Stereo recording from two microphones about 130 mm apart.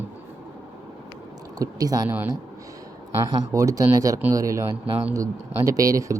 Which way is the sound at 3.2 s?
30° right (ahead or behind).